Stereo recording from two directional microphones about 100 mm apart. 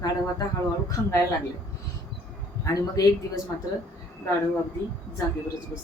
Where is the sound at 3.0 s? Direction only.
35° left (ahead or behind).